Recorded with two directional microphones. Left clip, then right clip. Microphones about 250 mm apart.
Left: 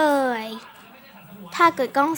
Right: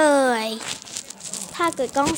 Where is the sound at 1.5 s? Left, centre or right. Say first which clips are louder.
Left 4 dB; centre.